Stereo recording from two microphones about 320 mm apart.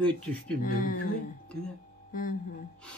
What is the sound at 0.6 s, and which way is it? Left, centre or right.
Speech, left.